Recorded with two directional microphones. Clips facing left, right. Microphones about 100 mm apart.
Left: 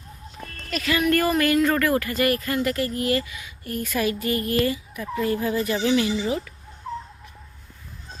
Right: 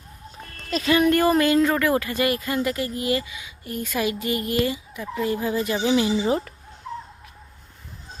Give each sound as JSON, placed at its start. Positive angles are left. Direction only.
{"t": 0.7, "sound": "speech", "side_deg": -25}
{"t": 6.2, "sound": "speech", "side_deg": -35}